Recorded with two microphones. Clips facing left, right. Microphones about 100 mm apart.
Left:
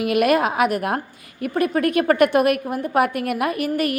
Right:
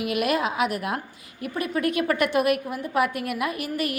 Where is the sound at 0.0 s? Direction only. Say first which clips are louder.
Left 6 dB; 55° left (ahead or behind).